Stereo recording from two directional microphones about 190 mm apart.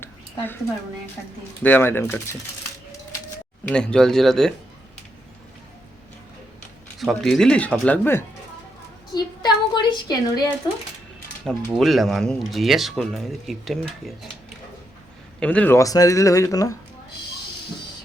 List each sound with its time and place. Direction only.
0.0 s a sound: 10° left (ahead or behind)
1.6 s speech: 10° left (ahead or behind)
3.7 s speech: 5° left (ahead or behind)
7.0 s speech: centre (ahead or behind)
9.1 s a woman's voice: 20° left (ahead or behind)
11.4 s speech: centre (ahead or behind)
15.4 s speech: 5° left (ahead or behind)